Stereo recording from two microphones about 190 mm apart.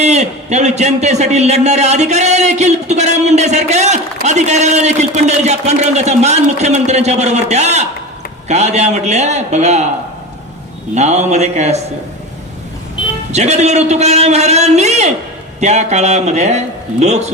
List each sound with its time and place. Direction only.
0.0 s a man's voice: 35° right (ahead or behind)
10.9 s a man's voice: 35° right (ahead or behind)
13.3 s a man's voice: 35° right (ahead or behind)